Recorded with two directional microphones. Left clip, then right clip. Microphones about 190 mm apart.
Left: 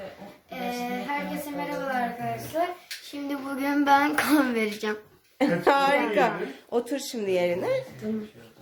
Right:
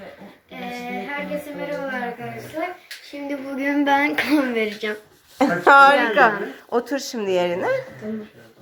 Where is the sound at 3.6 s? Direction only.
Centre (ahead or behind).